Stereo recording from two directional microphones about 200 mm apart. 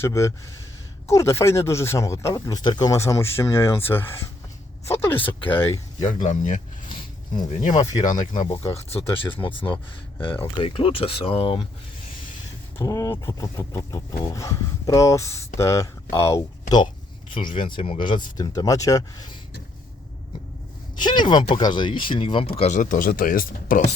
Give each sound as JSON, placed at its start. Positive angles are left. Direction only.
{"t": 0.0, "sound": "speech", "side_deg": 15}
{"t": 6.0, "sound": "speech", "side_deg": 40}
{"t": 6.8, "sound": "a sound", "side_deg": 25}
{"t": 8.3, "sound": "speech", "side_deg": 40}
{"t": 8.5, "sound": "speech", "side_deg": 25}
{"t": 12.8, "sound": "speech", "side_deg": 15}
{"t": 21.0, "sound": "speech", "side_deg": 20}